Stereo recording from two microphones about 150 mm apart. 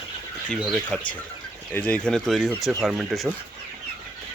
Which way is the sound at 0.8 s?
10° left (ahead or behind).